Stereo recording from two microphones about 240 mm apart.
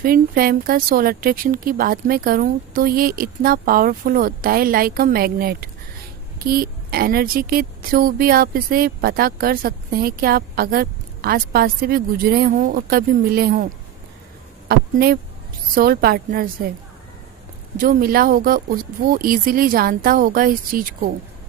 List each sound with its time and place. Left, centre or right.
0.0 s speech: right
14.7 s speech: right
17.7 s speech: right